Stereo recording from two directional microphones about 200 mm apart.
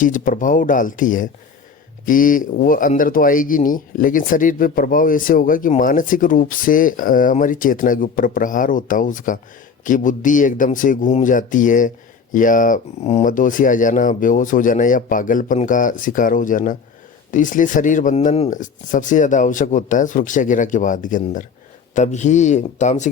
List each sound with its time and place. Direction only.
0.0 s speech: 40° left (ahead or behind)